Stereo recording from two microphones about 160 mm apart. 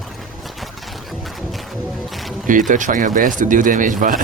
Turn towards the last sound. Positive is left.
turn(degrees=-55)  # may be behind; listen again after turning